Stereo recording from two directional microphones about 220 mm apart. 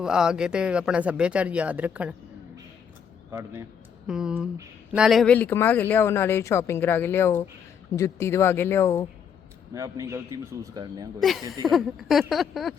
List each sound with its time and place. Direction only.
0.0 s speech: 5° right (ahead or behind)
3.3 s a man's voice: 10° right (ahead or behind); by 9.0 s 15° left (ahead or behind)
9.7 s a man's voice: 15° right (ahead or behind)
11.2 s speech: centre (ahead or behind)